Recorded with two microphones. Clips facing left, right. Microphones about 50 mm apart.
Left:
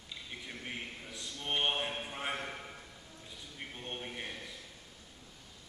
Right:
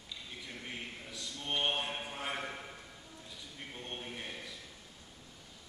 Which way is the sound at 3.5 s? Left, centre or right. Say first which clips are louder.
Left 2 dB; centre.